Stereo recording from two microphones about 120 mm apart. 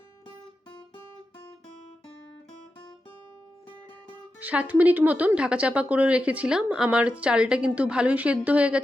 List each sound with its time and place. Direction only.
4.4 s speech: 10° right (ahead or behind)